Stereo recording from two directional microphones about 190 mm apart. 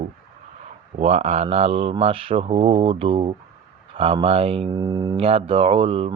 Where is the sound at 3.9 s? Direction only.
30° right (ahead or behind).